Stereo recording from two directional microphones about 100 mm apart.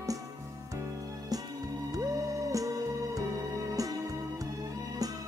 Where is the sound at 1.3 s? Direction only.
40° right (ahead or behind).